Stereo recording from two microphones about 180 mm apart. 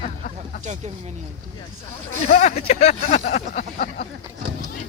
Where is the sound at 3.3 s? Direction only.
50° left (ahead or behind).